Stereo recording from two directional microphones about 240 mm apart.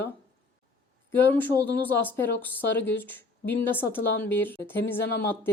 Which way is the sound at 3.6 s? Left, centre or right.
Centre.